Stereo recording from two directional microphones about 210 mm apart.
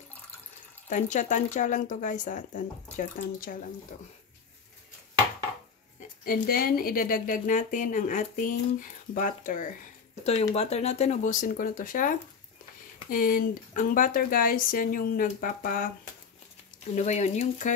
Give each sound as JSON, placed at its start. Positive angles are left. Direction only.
{"t": 0.8, "sound": "speech", "side_deg": 35}
{"t": 5.9, "sound": "speech", "side_deg": 45}
{"t": 16.9, "sound": "speech", "side_deg": 35}